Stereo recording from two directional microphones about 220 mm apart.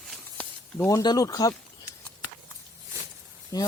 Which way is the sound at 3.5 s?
15° left (ahead or behind).